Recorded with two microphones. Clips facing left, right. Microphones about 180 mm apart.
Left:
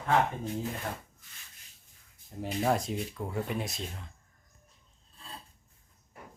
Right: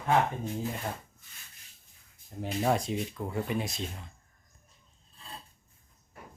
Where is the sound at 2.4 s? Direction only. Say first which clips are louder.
Right 1 dB; centre (ahead or behind).